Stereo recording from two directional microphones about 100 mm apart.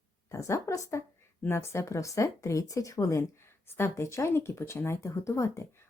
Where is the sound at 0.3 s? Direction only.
30° left (ahead or behind).